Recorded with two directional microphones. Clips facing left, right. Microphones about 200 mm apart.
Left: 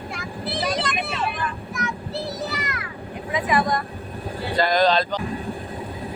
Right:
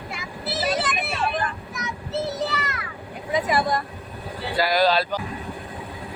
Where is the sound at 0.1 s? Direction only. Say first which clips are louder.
Left 1 dB; 5° right (ahead or behind).